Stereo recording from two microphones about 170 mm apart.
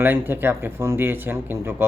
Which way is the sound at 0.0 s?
10° right (ahead or behind).